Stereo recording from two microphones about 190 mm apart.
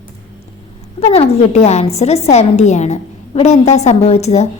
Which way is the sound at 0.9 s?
30° left (ahead or behind).